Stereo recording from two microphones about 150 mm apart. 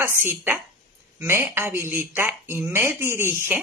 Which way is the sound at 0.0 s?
15° right (ahead or behind).